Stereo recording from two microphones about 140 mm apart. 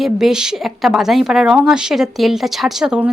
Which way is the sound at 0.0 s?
5° right (ahead or behind).